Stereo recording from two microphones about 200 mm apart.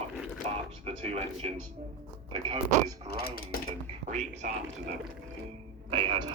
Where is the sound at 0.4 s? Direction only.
30° right (ahead or behind).